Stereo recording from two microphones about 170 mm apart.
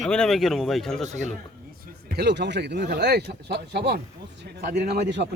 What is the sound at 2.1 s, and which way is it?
Speech, 85° right.